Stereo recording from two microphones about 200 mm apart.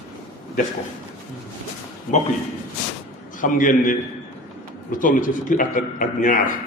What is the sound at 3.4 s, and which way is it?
Speech, 40° left (ahead or behind).